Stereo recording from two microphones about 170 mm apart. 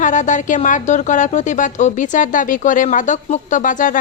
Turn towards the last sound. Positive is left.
turn(degrees=50)  # may be behind; listen again after turning